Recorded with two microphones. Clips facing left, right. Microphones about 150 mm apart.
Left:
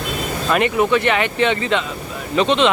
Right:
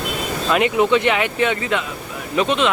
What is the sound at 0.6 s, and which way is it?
Speech, 15° right (ahead or behind).